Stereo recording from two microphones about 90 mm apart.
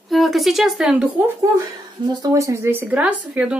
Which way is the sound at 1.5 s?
40° right (ahead or behind).